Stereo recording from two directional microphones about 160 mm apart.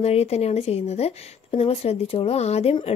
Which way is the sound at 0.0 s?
40° left (ahead or behind).